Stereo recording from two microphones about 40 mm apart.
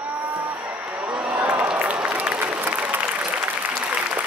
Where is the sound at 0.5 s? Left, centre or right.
Right.